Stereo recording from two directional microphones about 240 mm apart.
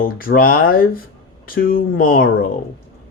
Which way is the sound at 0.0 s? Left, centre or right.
Left.